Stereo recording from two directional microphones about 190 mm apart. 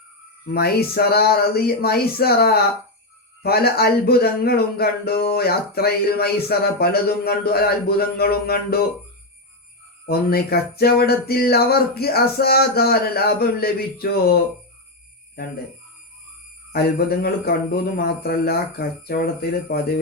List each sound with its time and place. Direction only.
0.4 s speech: 55° left (ahead or behind)
10.1 s speech: 55° left (ahead or behind)
16.7 s speech: 55° left (ahead or behind)